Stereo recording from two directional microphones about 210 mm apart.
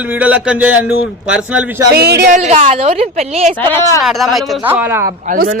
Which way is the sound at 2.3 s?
35° right (ahead or behind).